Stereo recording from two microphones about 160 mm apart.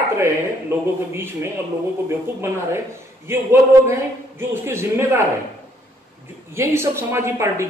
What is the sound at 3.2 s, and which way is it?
Speech, 15° right (ahead or behind).